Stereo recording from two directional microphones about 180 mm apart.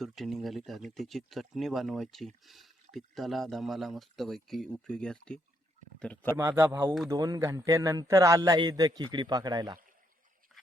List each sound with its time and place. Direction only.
0.0 s speech: centre (ahead or behind)
6.3 s a man's voice: 15° right (ahead or behind)